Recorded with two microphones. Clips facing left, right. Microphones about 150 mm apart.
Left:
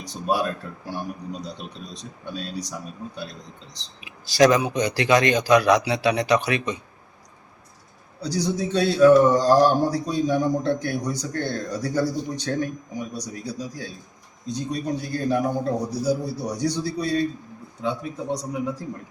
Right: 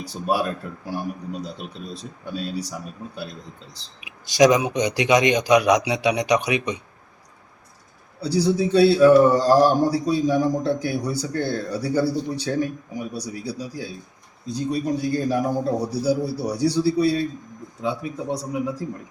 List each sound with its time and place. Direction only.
0.7 s speech: 10° right (ahead or behind)
4.3 s speech: 15° right (ahead or behind)
8.3 s a man's voice: 30° right (ahead or behind)
8.5 s speech: 5° right (ahead or behind)